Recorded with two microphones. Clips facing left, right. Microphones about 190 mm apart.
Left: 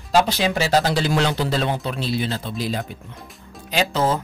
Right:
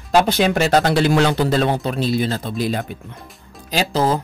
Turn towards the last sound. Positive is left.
turn(degrees=-35)  # may be behind; listen again after turning